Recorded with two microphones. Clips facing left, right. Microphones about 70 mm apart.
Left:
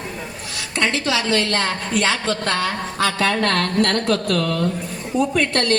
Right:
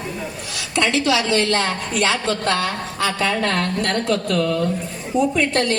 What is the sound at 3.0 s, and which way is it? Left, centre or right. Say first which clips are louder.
A woman's voice: left 1 dB; left.